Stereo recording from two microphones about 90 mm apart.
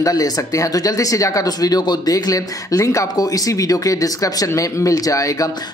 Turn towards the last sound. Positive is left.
turn(degrees=40)  # may be behind; listen again after turning